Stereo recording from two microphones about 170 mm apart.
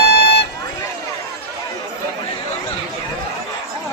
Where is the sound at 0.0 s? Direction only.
65° left (ahead or behind).